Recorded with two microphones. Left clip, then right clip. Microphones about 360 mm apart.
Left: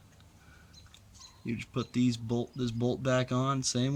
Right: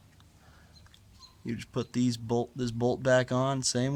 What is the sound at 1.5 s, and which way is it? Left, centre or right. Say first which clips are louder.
Speech: right 1 dB; centre.